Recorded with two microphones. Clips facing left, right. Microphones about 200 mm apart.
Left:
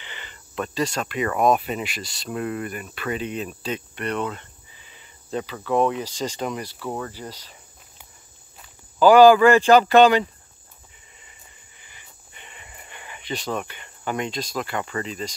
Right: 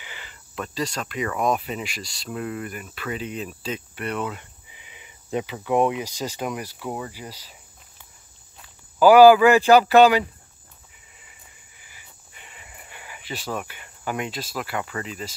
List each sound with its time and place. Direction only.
0.0 s cricket: 5° right (ahead or behind)
1.0 s speech: 60° left (ahead or behind)
2.7 s cricket: centre (ahead or behind)
3.7 s speech: 5° right (ahead or behind)
9.0 s speech: 10° right (ahead or behind)
11.1 s a sound: 5° right (ahead or behind)